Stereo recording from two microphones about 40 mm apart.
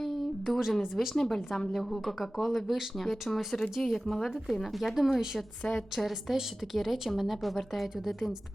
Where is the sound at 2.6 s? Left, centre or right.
Centre.